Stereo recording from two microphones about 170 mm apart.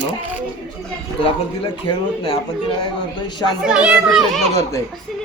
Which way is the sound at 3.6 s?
5° right (ahead or behind).